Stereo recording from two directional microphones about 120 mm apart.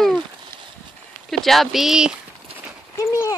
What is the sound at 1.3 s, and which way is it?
Speech, centre (ahead or behind).